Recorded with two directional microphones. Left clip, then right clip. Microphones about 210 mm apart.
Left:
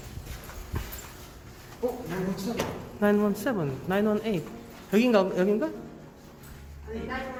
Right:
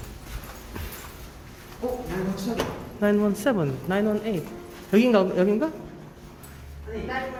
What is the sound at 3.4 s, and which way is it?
Speech, 10° right (ahead or behind).